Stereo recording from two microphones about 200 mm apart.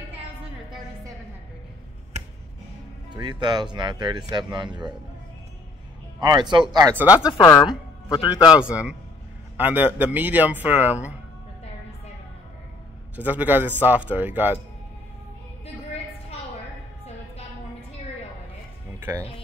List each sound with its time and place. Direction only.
2.1 s finger snapping: 35° right (ahead or behind)
3.1 s speech: 20° right (ahead or behind)
6.7 s speech: 15° right (ahead or behind)
7.2 s a man's voice: 20° left (ahead or behind)
8.5 s speech: 5° right (ahead or behind)
13.1 s speech: 10° right (ahead or behind)
18.9 s music: 15° right (ahead or behind)